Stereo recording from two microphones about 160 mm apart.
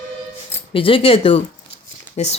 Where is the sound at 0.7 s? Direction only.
35° left (ahead or behind).